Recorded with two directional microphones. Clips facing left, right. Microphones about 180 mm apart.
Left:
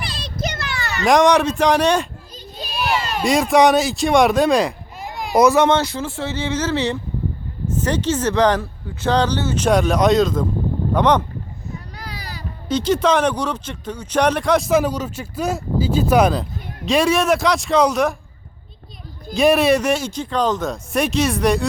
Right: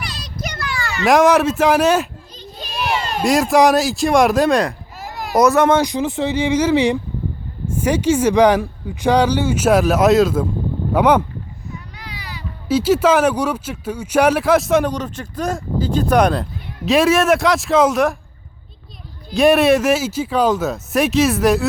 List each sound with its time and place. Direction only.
0.0 s children playing: 30° left (ahead or behind)
1.0 s speech: 5° right (ahead or behind)
2.4 s a sound: 5° left (ahead or behind)
3.2 s speech: centre (ahead or behind)
5.7 s speech: 15° right (ahead or behind)
11.9 s a sound: 40° left (ahead or behind)
12.6 s speech: 5° right (ahead or behind)
19.3 s speech: centre (ahead or behind)